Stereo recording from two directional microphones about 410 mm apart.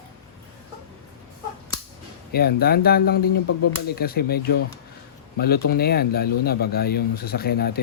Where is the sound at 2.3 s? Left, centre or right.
Left.